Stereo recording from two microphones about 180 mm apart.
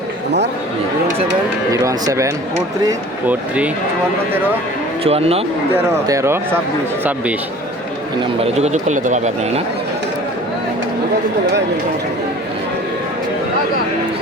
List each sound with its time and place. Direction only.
1.7 s speech: 20° right (ahead or behind)
3.2 s speech: 5° right (ahead or behind)
5.0 s speech: 35° right (ahead or behind)
5.7 s speech: 15° right (ahead or behind)
8.5 s speech: 40° right (ahead or behind)